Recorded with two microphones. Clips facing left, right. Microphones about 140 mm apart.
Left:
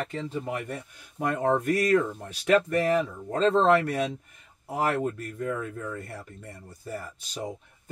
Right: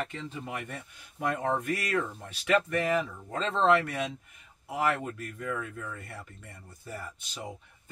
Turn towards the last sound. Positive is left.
turn(degrees=40)  # may be behind; listen again after turning